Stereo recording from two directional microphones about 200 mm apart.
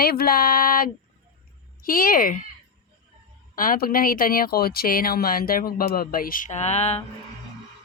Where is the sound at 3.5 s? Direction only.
45° left (ahead or behind).